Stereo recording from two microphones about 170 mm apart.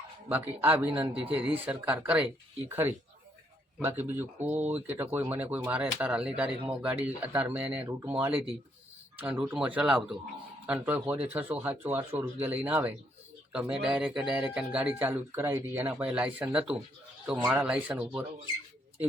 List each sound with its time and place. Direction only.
0.3 s speech: 10° right (ahead or behind)